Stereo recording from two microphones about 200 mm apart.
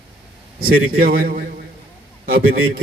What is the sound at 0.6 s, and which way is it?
Speech, 50° right (ahead or behind).